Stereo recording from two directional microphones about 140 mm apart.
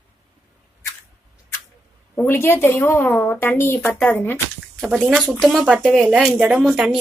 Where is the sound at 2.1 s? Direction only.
15° left (ahead or behind).